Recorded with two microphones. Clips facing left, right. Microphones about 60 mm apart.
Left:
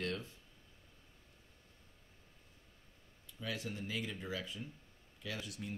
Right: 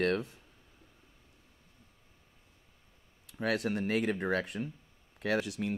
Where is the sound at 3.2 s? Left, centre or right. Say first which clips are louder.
Right 11 dB; right.